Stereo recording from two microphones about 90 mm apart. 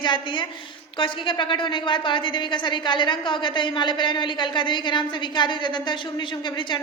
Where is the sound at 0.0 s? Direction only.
65° left (ahead or behind).